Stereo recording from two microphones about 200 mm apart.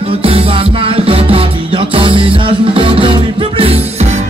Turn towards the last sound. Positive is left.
turn(degrees=-30)  # may be behind; listen again after turning